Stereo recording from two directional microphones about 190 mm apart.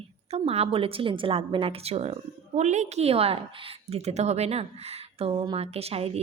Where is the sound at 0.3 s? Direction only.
30° right (ahead or behind).